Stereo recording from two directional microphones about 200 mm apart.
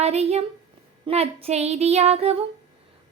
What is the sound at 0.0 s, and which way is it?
A woman's voice, 30° right (ahead or behind).